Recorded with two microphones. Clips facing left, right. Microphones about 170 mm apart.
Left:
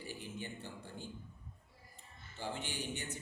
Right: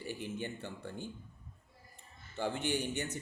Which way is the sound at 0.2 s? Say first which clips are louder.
Right 5 dB; 60° right (ahead or behind).